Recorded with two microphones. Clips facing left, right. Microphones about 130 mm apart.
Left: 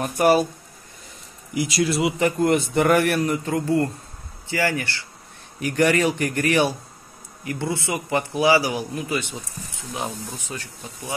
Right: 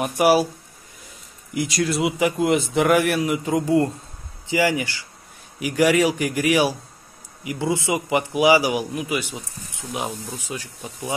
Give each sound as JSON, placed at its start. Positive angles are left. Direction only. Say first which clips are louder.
{"t": 0.0, "sound": "a man's voice", "louder": "right 1 dB", "side_deg": -5}
{"t": 1.8, "sound": "a man's voice", "louder": "even", "side_deg": 0}